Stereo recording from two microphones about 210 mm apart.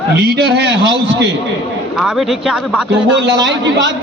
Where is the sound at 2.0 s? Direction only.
Centre (ahead or behind).